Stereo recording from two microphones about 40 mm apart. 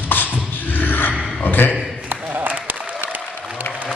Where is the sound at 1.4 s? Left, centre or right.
Left.